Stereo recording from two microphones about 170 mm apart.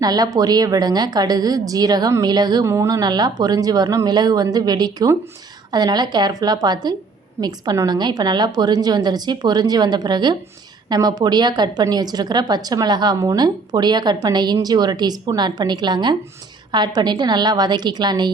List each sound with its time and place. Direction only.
0.0 s a woman's voice: 25° right (ahead or behind)